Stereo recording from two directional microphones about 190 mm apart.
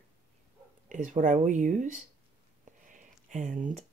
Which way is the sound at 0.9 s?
40° right (ahead or behind).